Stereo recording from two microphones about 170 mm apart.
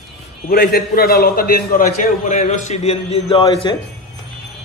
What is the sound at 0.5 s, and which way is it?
A man's voice, 60° left (ahead or behind).